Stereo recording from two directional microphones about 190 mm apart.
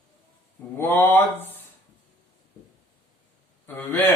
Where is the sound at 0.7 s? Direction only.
10° left (ahead or behind).